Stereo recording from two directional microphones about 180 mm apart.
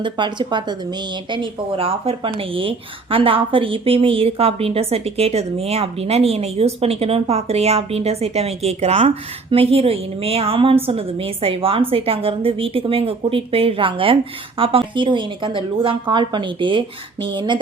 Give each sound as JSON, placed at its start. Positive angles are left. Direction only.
{"t": 0.0, "sound": "a woman's voice", "side_deg": -25}